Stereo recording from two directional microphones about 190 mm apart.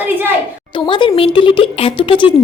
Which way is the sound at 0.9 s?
25° left (ahead or behind).